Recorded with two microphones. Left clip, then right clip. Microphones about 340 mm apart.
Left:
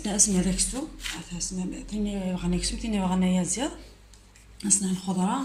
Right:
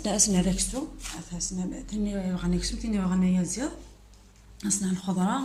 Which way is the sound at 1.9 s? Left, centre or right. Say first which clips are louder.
Left 1 dB; centre.